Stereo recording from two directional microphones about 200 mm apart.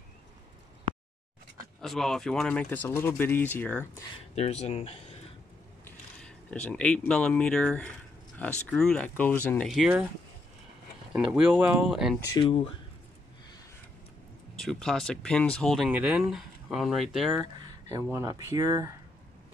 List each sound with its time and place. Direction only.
1.8 s speech: centre (ahead or behind)
4.4 s speech: 30° left (ahead or behind)
5.9 s speech: 5° left (ahead or behind)
11.1 s speech: 5° right (ahead or behind)
12.3 s speech: 25° left (ahead or behind)
14.6 s speech: centre (ahead or behind)
18.1 s speech: 15° right (ahead or behind)